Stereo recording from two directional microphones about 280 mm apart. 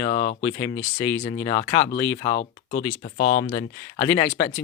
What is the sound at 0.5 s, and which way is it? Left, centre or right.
Speech, centre.